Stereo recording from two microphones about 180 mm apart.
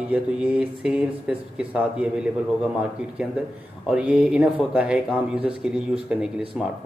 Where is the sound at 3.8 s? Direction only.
5° right (ahead or behind).